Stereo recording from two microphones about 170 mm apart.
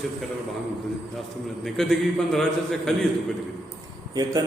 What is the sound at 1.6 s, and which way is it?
A man's voice, centre (ahead or behind).